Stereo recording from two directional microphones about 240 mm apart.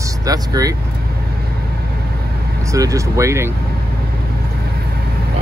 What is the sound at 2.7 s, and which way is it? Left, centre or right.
Speech, centre.